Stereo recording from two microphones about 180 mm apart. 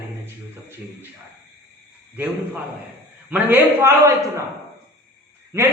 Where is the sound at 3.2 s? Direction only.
10° right (ahead or behind).